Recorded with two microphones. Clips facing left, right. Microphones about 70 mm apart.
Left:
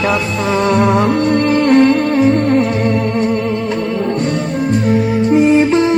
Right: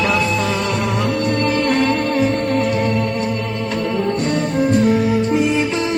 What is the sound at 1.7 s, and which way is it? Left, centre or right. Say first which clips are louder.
Music: left 7 dB; left.